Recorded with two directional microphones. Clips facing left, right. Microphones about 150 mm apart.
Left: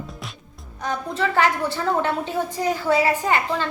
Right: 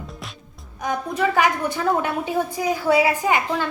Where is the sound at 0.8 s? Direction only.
15° right (ahead or behind).